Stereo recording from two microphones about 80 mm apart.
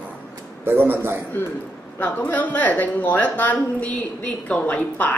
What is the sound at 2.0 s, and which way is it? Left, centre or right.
Speech, left.